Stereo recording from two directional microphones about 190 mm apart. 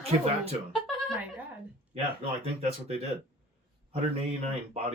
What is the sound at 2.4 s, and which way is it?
Speech, 35° right (ahead or behind).